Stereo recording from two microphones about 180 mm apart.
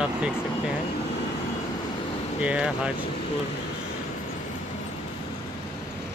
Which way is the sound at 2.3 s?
5° right (ahead or behind).